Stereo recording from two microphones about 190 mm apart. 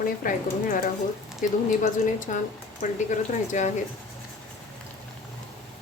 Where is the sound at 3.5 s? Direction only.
40° left (ahead or behind).